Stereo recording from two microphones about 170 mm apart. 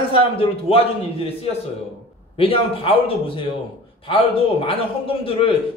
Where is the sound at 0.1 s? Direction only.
35° left (ahead or behind).